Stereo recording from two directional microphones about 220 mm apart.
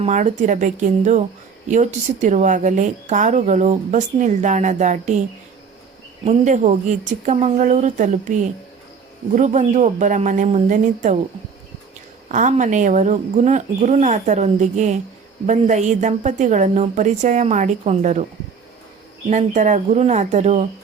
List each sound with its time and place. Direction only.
0.0 s speech: 35° right (ahead or behind)
6.2 s speech: 35° right (ahead or behind)
12.3 s speech: 35° right (ahead or behind)
19.3 s speech: 30° right (ahead or behind)